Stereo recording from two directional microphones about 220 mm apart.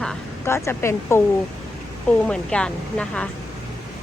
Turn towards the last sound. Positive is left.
turn(degrees=5)  # may be behind; listen again after turning